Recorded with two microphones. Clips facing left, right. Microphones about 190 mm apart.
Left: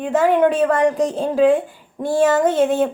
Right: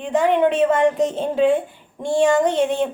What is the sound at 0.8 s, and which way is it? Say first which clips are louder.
Female singing: left 1 dB; centre (ahead or behind).